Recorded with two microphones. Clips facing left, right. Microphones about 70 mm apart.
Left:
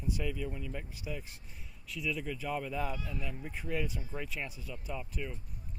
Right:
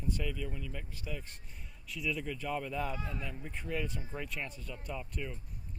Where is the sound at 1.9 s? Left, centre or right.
Centre.